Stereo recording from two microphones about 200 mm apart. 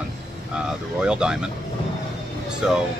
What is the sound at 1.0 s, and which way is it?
Speech, 5° right (ahead or behind).